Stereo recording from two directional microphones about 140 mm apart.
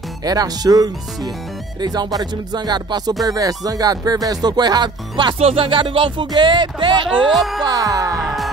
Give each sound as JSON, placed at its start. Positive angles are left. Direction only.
{"t": 0.2, "sound": "music", "side_deg": -25}
{"t": 7.2, "sound": "music", "side_deg": 0}
{"t": 7.6, "sound": "music", "side_deg": -25}
{"t": 8.2, "sound": "music", "side_deg": 0}